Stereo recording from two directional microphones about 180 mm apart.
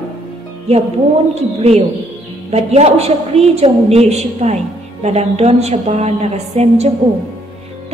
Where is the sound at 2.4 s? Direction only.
35° right (ahead or behind).